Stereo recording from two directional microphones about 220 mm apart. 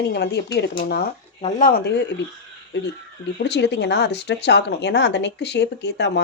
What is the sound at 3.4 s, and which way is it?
Speech, 50° left (ahead or behind).